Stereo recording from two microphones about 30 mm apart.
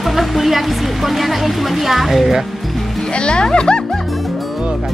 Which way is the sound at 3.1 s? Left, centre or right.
Left.